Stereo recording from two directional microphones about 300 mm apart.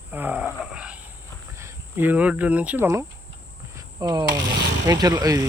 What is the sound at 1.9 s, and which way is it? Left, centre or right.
Speech, centre.